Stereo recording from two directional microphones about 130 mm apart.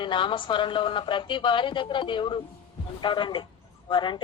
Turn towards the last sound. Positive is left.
turn(degrees=40)  # may be behind; listen again after turning